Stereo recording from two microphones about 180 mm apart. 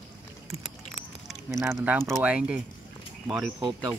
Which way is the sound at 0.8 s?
Centre (ahead or behind).